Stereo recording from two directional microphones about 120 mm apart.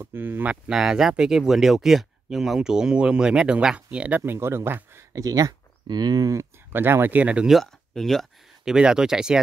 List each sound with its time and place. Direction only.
0.0 s speech: 20° right (ahead or behind)
4.2 s speech: 20° right (ahead or behind)
6.7 s speech: 20° right (ahead or behind)